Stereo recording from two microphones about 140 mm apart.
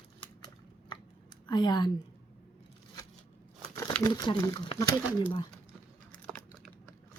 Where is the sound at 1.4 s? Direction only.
30° left (ahead or behind).